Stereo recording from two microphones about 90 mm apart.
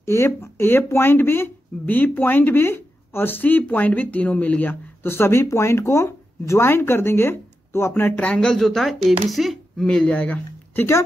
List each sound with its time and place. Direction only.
0.0 s speech: 30° left (ahead or behind)
8.2 s speech: 10° left (ahead or behind)
9.8 s speech: 10° left (ahead or behind)